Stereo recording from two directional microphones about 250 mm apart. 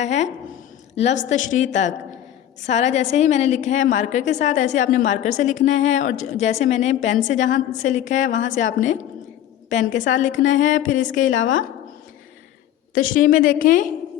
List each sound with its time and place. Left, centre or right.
0.0 s a woman's voice: left
11.3 s speech: left
12.9 s a woman's voice: left